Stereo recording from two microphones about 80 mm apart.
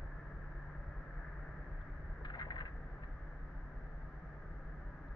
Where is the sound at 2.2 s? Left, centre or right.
Left.